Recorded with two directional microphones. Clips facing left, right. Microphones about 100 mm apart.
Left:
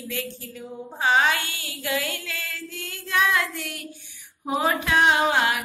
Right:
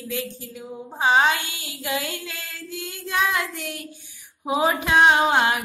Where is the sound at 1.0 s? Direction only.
20° right (ahead or behind).